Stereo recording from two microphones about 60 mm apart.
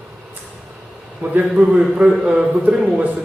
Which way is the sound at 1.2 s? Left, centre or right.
Right.